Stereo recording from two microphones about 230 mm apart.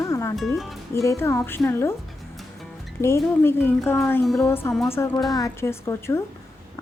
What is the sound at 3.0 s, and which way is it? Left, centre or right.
Speech, centre.